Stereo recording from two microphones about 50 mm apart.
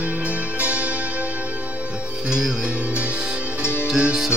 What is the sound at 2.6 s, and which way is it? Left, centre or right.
Music, right.